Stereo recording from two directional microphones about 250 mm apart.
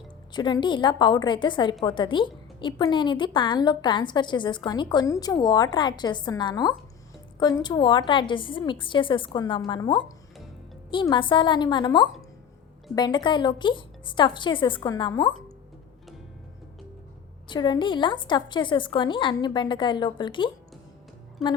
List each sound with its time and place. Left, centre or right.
0.3 s a woman's voice: centre
17.5 s a woman's voice: centre
21.4 s speech: centre